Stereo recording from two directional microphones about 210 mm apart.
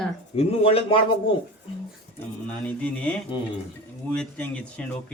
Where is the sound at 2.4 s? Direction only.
5° left (ahead or behind).